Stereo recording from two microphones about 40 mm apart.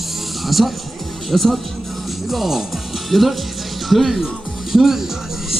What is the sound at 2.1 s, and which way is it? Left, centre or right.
Music, centre.